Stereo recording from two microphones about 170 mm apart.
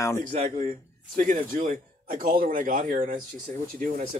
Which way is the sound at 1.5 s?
50° right (ahead or behind).